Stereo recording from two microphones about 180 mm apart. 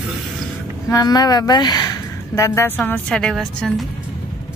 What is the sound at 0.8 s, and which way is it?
A woman's voice, 20° left (ahead or behind).